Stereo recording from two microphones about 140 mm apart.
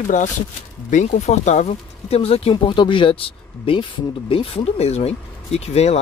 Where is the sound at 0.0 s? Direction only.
65° left (ahead or behind); by 2.5 s 45° left (ahead or behind).